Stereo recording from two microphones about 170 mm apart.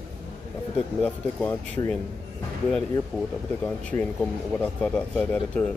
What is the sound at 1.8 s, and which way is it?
Speech, 25° left (ahead or behind).